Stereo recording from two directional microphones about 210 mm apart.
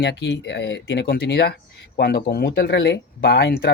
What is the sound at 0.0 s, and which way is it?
Speech, 55° left (ahead or behind).